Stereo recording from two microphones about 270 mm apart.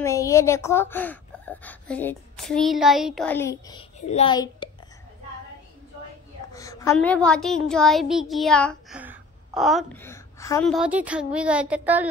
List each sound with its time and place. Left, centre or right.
0.0 s a woman's voice: centre
4.0 s a child's voice: left
6.5 s a child's voice: centre
9.0 s a sound: centre
10.1 s a sound: centre
10.7 s a child's voice: centre